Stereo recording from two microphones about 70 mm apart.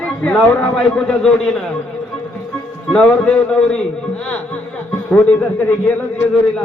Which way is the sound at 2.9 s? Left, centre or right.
Centre.